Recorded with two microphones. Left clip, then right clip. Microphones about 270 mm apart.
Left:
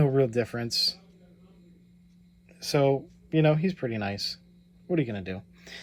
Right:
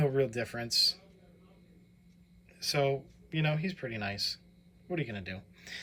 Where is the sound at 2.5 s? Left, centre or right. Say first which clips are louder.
Left 6 dB; centre.